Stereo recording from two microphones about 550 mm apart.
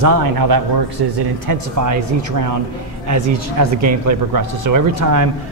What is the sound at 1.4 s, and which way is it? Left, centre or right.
Speech, right.